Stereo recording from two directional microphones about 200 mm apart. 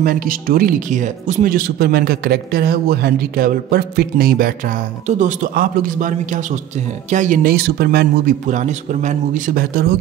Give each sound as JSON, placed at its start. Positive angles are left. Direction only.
{"t": 0.0, "sound": "speech", "side_deg": -45}